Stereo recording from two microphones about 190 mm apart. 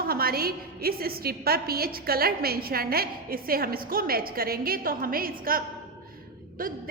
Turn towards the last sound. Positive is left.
turn(degrees=-50)  # may be behind; listen again after turning